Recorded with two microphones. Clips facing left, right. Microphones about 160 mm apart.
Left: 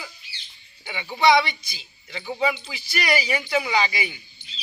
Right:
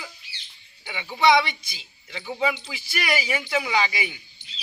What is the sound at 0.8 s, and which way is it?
Speech, 5° right (ahead or behind).